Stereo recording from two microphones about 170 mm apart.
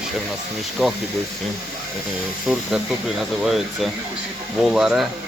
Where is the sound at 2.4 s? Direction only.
Centre (ahead or behind).